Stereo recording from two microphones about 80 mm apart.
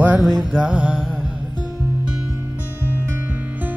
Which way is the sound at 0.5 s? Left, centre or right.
Centre.